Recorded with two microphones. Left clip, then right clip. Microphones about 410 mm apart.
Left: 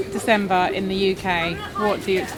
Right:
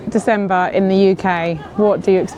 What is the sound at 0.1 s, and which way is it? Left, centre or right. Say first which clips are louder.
Speech: right 5 dB; right.